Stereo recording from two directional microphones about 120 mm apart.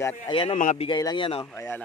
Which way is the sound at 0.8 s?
40° left (ahead or behind).